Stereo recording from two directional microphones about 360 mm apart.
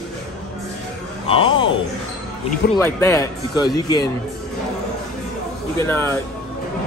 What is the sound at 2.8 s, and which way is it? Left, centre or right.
Speech, centre.